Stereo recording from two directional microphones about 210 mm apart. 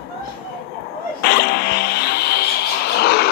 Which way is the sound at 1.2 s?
50° left (ahead or behind).